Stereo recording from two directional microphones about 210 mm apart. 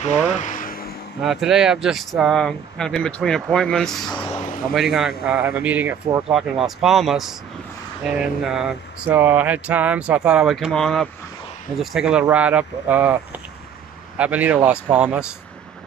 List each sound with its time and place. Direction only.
0.3 s vehicle: 35° left (ahead or behind)
1.2 s speech: centre (ahead or behind)
4.1 s a man's voice: 25° left (ahead or behind)
4.7 s speech: centre (ahead or behind)
6.6 s speech: centre (ahead or behind)